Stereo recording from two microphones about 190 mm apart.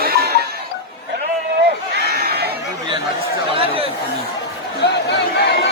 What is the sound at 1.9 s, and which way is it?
Crowd, 60° right (ahead or behind).